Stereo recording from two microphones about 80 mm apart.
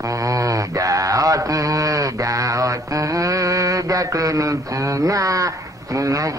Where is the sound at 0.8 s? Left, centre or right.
Right.